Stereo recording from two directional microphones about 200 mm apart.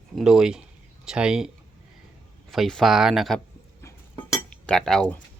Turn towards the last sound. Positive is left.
turn(degrees=5)  # may be behind; listen again after turning